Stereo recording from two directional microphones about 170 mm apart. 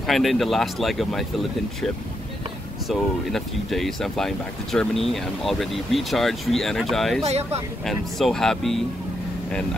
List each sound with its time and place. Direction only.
0.0 s speech: centre (ahead or behind)
2.9 s speech: centre (ahead or behind)
7.2 s speech: 40° right (ahead or behind)
7.8 s speech: centre (ahead or behind)